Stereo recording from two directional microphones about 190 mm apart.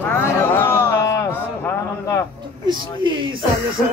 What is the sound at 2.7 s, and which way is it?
Speech, 25° right (ahead or behind).